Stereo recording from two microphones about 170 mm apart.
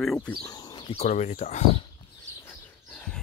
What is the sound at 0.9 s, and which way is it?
Speech, 40° left (ahead or behind).